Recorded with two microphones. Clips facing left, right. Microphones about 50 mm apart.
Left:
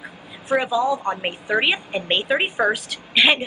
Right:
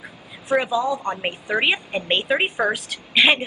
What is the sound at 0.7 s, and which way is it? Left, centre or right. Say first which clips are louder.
A woman's voice: left 2 dB; centre.